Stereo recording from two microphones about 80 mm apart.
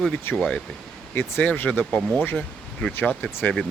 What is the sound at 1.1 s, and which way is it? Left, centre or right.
Speech, left.